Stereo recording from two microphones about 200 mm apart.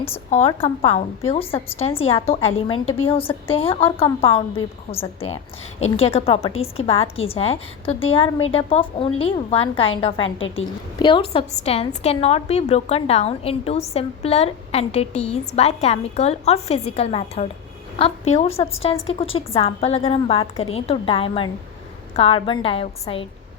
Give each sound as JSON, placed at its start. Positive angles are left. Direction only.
{"t": 0.3, "sound": "a woman's voice", "side_deg": 30}
{"t": 10.4, "sound": "a woman's voice", "side_deg": 75}
{"t": 11.0, "sound": "a woman's voice", "side_deg": 25}